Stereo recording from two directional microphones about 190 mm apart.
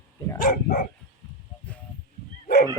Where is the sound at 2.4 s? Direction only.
55° left (ahead or behind).